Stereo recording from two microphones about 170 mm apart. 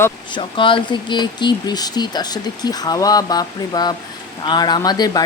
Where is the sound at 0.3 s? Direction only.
30° left (ahead or behind).